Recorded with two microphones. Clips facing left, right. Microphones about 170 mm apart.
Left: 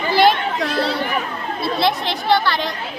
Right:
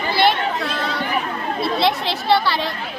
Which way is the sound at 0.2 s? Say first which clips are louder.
Left 3 dB; 40° left (ahead or behind).